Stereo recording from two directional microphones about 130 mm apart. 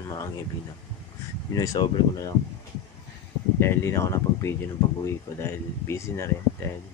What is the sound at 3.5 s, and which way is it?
Speech, 20° left (ahead or behind).